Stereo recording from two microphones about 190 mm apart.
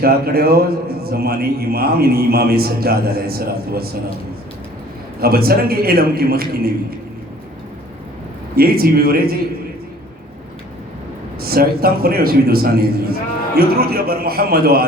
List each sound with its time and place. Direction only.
0.0 s a man's voice: 55° right (ahead or behind)
5.2 s a man's voice: 55° right (ahead or behind)
8.5 s a man's voice: 55° right (ahead or behind)
11.3 s a man's voice: 55° right (ahead or behind)